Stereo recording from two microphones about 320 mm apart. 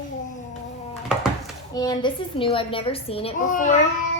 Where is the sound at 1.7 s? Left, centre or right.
Centre.